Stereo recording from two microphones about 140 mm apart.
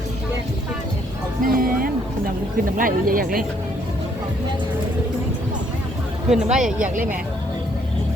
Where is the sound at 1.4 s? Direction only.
90° right.